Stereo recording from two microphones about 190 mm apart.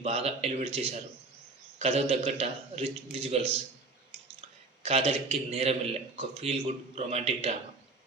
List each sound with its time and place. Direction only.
0.0 s a man's voice: 35° right (ahead or behind)